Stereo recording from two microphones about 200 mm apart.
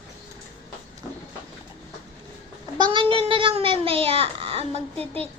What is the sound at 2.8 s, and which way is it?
Cat, 25° right (ahead or behind).